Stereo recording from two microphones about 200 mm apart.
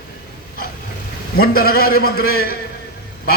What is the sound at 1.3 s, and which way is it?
A man's voice, 50° left (ahead or behind).